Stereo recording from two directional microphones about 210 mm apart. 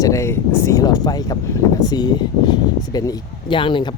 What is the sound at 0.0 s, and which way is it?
Speech, 15° left (ahead or behind).